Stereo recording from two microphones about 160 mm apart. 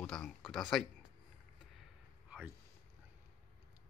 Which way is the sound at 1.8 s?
5° right (ahead or behind).